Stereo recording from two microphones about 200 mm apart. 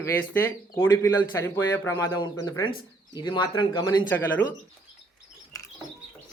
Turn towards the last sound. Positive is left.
turn(degrees=10)  # may be behind; listen again after turning